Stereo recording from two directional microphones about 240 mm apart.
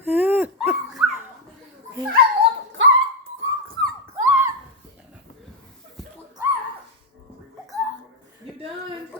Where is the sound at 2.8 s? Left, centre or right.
Right.